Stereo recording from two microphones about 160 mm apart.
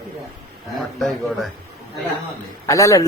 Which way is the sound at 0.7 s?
Centre (ahead or behind).